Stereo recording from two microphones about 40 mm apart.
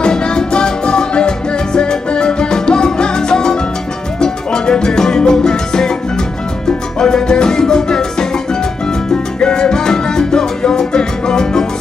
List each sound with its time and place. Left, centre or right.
0.0 s music: left
7.0 s music: centre